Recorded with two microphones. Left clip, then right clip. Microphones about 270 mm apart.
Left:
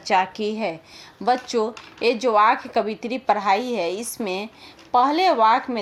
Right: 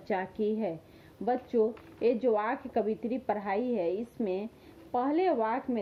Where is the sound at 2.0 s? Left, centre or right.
Centre.